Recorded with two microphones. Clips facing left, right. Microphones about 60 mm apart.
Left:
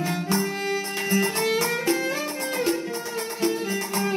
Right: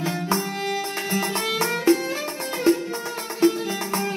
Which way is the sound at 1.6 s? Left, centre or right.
Right.